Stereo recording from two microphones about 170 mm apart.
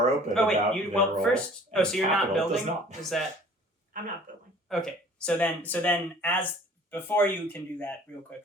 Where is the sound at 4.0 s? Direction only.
50° right (ahead or behind).